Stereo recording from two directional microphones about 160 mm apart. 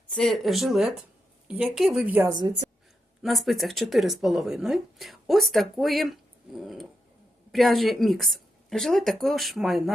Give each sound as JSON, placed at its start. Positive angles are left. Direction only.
{"t": 0.1, "sound": "speech", "side_deg": 5}
{"t": 3.2, "sound": "speech", "side_deg": 0}